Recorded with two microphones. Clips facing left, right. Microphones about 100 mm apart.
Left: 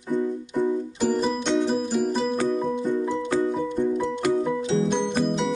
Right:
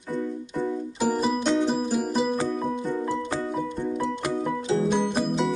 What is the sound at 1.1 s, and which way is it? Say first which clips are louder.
Music: even; 5° right (ahead or behind).